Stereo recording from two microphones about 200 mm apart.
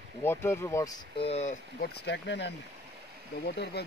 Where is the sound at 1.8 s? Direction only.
60° left (ahead or behind).